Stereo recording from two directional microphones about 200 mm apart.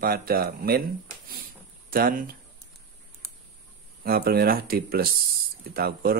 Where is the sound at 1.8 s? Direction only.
45° right (ahead or behind).